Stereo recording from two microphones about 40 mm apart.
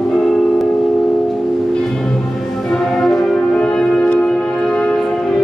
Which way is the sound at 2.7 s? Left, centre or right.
Centre.